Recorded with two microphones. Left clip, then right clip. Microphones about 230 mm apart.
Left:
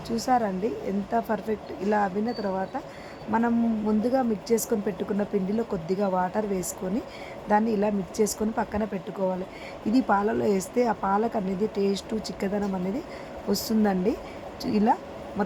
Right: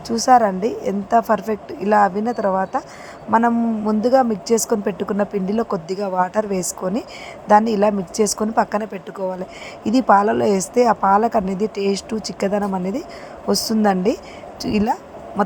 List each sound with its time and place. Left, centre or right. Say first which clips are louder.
0.2 s a woman's voice: right 11 dB; right